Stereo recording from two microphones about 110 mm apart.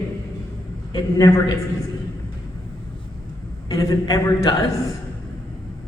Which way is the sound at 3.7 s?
30° left (ahead or behind).